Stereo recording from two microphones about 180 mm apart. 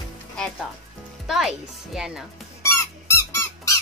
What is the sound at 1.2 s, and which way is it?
Speech, centre (ahead or behind).